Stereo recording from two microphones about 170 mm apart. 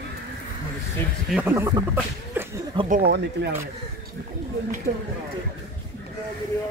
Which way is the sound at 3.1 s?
80° right.